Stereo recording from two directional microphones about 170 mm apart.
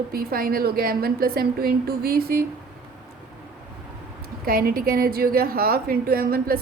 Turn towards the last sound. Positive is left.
turn(degrees=-60)  # may be behind; listen again after turning